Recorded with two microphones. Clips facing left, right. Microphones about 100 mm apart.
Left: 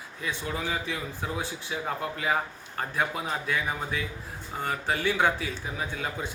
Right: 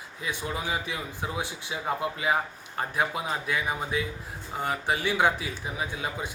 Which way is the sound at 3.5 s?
15° right (ahead or behind).